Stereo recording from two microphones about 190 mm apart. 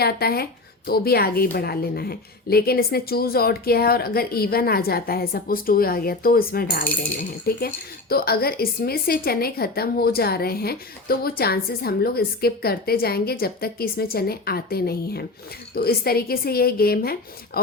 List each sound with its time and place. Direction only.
0.0 s a woman's voice: 55° left (ahead or behind)